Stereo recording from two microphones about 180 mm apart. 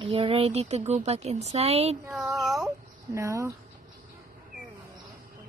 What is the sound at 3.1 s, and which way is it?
Speech, 15° right (ahead or behind).